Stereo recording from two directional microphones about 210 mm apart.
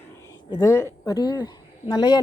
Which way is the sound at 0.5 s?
15° left (ahead or behind).